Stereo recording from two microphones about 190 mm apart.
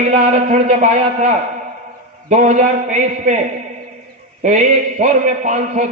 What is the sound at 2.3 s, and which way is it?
Speech, 40° right (ahead or behind).